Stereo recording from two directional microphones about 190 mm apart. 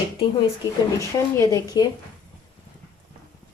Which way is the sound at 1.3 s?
20° left (ahead or behind).